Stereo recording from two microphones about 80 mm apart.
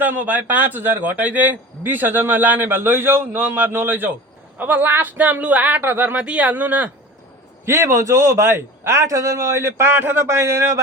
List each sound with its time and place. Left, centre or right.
0.0 s speech: right
7.6 s a man's voice: right